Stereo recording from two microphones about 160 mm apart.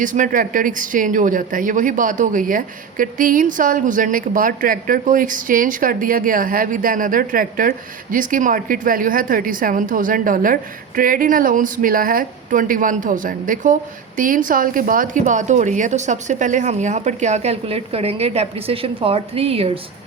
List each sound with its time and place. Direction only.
0.0 s speech: 55° right (ahead or behind); by 19.8 s 40° right (ahead or behind)